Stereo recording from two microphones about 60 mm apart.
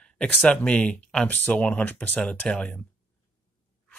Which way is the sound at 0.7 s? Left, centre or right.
Centre.